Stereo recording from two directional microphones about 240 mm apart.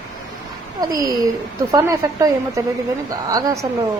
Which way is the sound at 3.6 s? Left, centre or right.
Centre.